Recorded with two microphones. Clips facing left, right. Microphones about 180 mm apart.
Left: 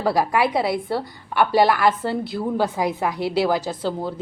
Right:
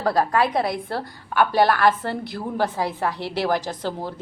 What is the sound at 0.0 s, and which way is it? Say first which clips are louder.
A woman's voice: left 1 dB; 10° left (ahead or behind).